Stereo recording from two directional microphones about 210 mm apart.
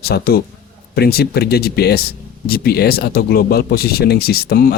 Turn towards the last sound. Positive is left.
turn(degrees=45)  # may be behind; listen again after turning